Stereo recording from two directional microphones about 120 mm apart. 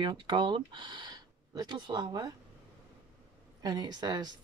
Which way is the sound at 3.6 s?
35° right (ahead or behind).